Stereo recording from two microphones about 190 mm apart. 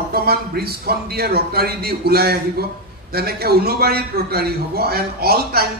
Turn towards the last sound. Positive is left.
turn(degrees=-55)  # may be behind; listen again after turning